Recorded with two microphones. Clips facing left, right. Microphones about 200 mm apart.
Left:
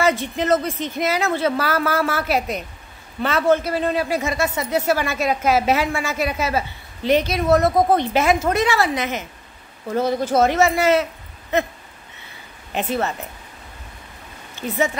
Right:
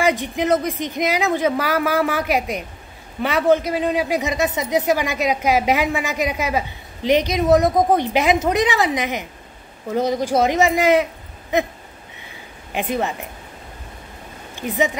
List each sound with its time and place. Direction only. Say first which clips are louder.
0.0 s a man's voice: right 1 dB; 15° right (ahead or behind)
12.7 s a man's voice: even; 15° right (ahead or behind)
14.5 s speech: right 1 dB; 15° right (ahead or behind)